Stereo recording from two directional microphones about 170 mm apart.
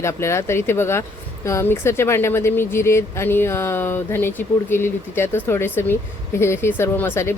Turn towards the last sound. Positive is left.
turn(degrees=15)  # may be behind; listen again after turning